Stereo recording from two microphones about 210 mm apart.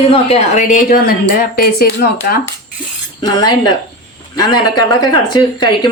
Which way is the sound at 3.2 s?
20° left (ahead or behind).